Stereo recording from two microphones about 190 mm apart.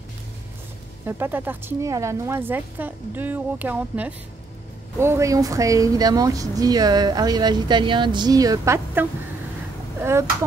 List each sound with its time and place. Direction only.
1.0 s a woman's voice: 10° right (ahead or behind)